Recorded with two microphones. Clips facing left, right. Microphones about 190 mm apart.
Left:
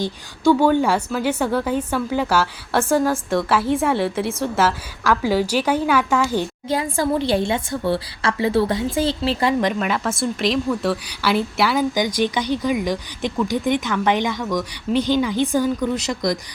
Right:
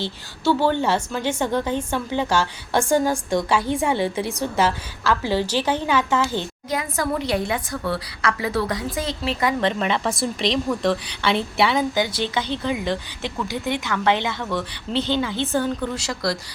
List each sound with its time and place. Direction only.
0.0 s a woman's voice: 10° left (ahead or behind)
6.7 s a woman's voice: 30° left (ahead or behind)
9.7 s a woman's voice: centre (ahead or behind)
11.9 s speech: 15° left (ahead or behind)